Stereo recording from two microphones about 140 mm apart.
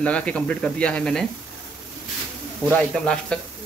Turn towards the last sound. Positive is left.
turn(degrees=5)  # may be behind; listen again after turning